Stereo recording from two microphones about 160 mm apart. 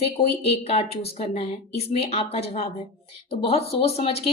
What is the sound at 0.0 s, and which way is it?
Speech, 40° left (ahead or behind).